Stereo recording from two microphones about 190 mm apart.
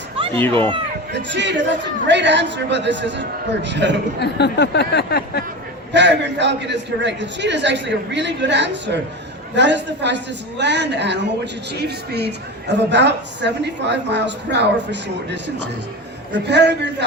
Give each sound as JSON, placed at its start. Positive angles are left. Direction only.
{"t": 0.5, "sound": "speech", "side_deg": -25}
{"t": 1.1, "sound": "a man's voice", "side_deg": -70}
{"t": 4.2, "sound": "speech", "side_deg": 60}
{"t": 5.9, "sound": "a man's voice", "side_deg": -70}